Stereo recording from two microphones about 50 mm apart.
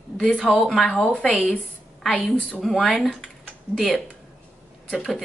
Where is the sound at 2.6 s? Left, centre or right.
Centre.